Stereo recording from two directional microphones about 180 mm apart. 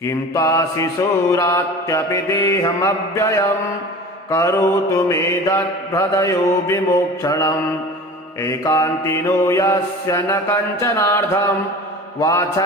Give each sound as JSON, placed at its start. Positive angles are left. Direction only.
{"t": 0.0, "sound": "mantra", "side_deg": 15}
{"t": 12.2, "sound": "mantra", "side_deg": 15}